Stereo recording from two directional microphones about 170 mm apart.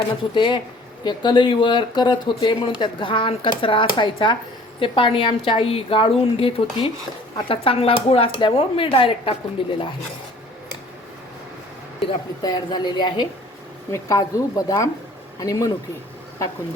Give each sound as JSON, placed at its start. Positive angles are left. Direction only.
{"t": 0.3, "sound": "a woman's voice", "side_deg": 30}
{"t": 12.0, "sound": "speech", "side_deg": 25}